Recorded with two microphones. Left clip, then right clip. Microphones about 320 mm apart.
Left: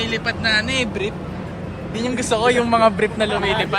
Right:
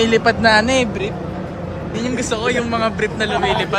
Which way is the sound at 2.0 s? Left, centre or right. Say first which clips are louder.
Left 2 dB; centre.